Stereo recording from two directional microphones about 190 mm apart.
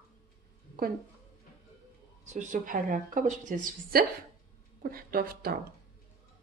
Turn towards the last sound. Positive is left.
turn(degrees=-50)  # may be behind; listen again after turning